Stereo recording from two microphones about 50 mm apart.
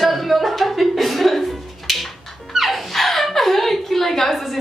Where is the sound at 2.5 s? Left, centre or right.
Centre.